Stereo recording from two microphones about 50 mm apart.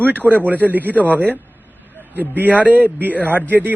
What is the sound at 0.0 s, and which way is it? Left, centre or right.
Speech, right.